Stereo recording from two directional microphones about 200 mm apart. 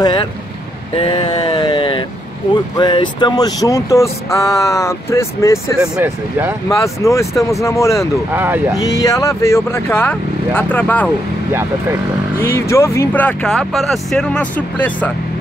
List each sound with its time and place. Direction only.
0.0 s speech: 20° left (ahead or behind)
0.9 s vehicle: 25° left (ahead or behind)
2.5 s speech: 20° left (ahead or behind)
5.9 s speech: 10° right (ahead or behind)
6.7 s speech: 15° left (ahead or behind)
8.3 s speech: 10° right (ahead or behind)
8.7 s speech: 15° left (ahead or behind)
12.4 s speech: 10° left (ahead or behind)